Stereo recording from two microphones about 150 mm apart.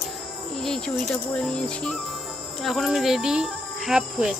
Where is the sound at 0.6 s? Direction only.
5° left (ahead or behind).